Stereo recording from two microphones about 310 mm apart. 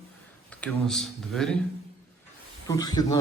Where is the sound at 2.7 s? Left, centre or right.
Centre.